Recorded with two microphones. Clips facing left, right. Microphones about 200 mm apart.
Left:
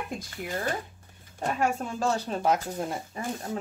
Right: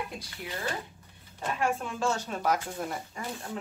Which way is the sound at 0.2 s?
45° left (ahead or behind).